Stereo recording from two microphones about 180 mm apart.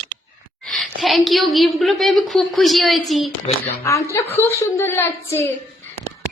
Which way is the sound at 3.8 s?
15° left (ahead or behind).